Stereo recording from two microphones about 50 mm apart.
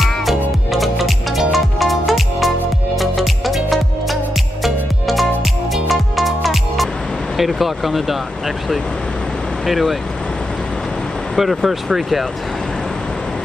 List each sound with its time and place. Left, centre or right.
0.0 s music: centre
7.3 s speech: centre
9.7 s speech: centre
11.3 s speech: centre